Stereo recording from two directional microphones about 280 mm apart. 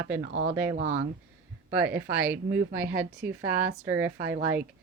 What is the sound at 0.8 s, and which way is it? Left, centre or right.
Speech, right.